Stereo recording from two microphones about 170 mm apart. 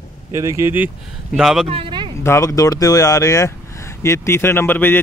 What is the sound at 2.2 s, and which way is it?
Speech, 15° left (ahead or behind).